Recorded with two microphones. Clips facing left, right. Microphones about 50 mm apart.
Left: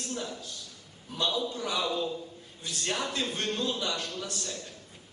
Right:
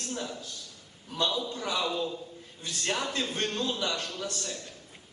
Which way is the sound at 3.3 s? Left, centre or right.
Right.